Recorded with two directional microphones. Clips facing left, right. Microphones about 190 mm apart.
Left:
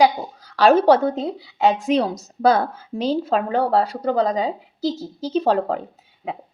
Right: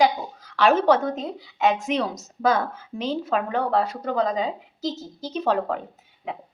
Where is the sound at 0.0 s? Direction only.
35° left (ahead or behind).